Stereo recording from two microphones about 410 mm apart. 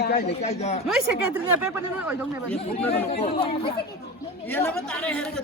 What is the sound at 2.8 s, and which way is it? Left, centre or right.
Speech, centre.